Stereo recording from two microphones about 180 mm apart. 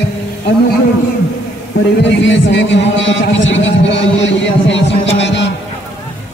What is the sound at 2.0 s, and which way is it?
A man's voice, 85° left.